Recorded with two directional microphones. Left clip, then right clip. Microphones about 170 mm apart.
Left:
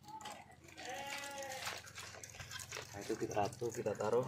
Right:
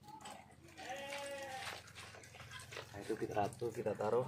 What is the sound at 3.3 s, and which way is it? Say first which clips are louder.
Speech: left 1 dB; 10° left (ahead or behind).